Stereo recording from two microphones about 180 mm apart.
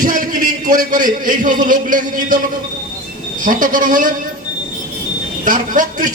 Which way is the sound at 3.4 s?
45° right (ahead or behind).